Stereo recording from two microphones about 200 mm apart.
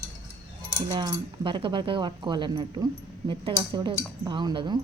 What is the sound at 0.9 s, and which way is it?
Speech, 25° right (ahead or behind).